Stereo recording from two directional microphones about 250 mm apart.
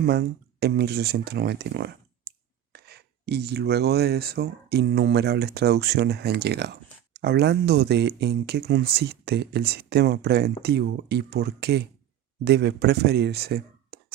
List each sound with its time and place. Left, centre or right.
0.0 s speech: right